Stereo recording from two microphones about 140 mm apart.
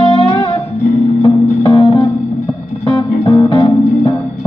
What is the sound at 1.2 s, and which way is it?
Music, 35° left (ahead or behind).